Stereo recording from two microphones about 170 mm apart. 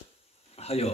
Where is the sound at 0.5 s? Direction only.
35° left (ahead or behind).